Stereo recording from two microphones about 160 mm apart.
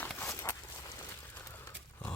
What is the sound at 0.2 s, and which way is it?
Walk, 15° left (ahead or behind).